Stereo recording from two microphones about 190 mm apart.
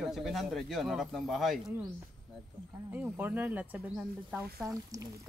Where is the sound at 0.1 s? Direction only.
Centre (ahead or behind).